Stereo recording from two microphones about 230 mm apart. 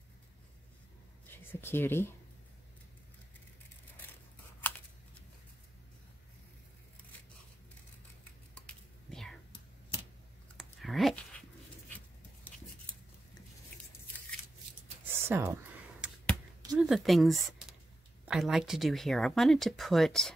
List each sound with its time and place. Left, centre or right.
1.3 s speech: centre
8.6 s whispering: centre
10.6 s dog: centre
15.0 s a sound: centre
18.2 s speech: centre